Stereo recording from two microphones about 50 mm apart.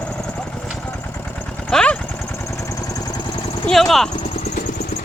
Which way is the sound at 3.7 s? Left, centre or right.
Centre.